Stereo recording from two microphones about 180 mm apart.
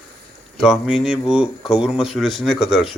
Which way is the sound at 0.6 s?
5° right (ahead or behind).